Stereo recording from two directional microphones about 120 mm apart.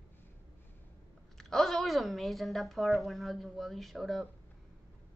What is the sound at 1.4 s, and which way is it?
A woman's voice, 5° left (ahead or behind).